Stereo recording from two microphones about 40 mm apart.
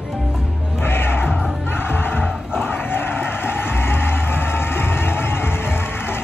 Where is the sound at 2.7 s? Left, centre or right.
Left.